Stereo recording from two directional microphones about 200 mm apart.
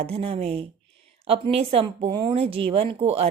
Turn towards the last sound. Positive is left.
turn(degrees=-30)  # may be behind; listen again after turning